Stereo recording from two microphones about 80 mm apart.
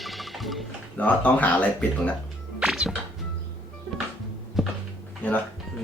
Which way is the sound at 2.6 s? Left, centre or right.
Centre.